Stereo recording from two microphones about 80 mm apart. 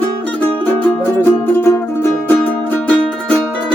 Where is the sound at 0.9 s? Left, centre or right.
Left.